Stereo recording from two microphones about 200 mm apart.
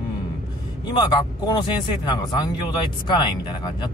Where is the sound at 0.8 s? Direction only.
20° left (ahead or behind).